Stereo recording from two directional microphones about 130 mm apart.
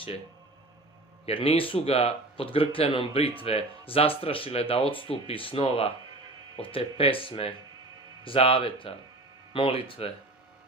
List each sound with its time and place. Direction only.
1.2 s speech: 50° left (ahead or behind)